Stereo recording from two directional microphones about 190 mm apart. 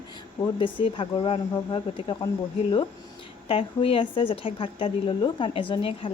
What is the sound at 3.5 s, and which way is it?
A woman's voice, 30° left (ahead or behind).